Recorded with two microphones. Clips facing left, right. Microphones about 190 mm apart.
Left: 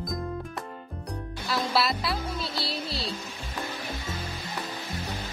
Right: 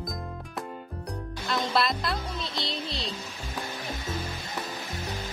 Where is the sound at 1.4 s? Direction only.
5° left (ahead or behind).